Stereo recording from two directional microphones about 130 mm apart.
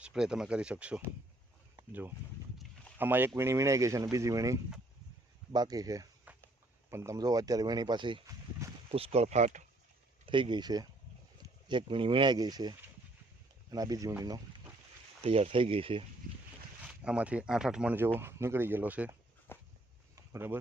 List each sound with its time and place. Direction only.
0.0 s speech: 5° right (ahead or behind); by 6.1 s 30° right (ahead or behind)
6.3 s walk: 10° right (ahead or behind)
6.9 s speech: 25° right (ahead or behind)
8.9 s speech: 55° right (ahead or behind)
10.2 s speech: 40° right (ahead or behind)
15.2 s speech: 50° right (ahead or behind)
16.8 s speech: 10° right (ahead or behind)
17.9 s speech: 15° right (ahead or behind)
19.5 s a sound: 15° left (ahead or behind)
20.1 s a sound: 20° right (ahead or behind)